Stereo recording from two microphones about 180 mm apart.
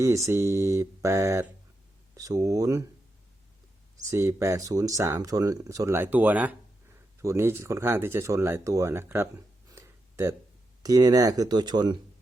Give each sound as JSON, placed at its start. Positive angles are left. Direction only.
{"t": 0.3, "sound": "speech", "side_deg": -15}
{"t": 4.1, "sound": "speech", "side_deg": -15}